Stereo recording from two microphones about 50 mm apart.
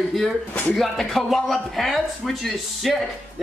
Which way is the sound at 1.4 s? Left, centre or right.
Centre.